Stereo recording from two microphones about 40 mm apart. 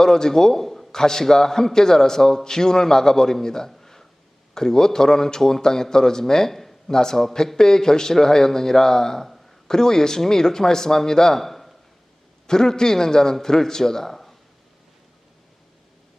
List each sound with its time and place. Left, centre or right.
0.0 s a man's voice: centre
3.7 s a sound: centre
4.5 s a man's voice: centre
12.5 s a man's voice: centre